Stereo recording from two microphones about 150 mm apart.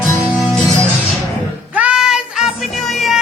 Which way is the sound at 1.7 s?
5° right (ahead or behind).